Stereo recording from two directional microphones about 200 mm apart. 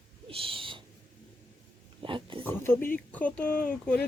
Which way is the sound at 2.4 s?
10° left (ahead or behind).